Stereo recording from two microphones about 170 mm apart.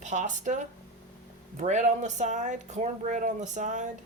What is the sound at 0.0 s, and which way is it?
Speech, 45° right (ahead or behind).